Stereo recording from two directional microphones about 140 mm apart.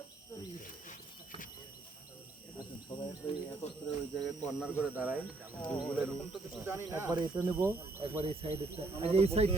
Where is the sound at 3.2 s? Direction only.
20° left (ahead or behind).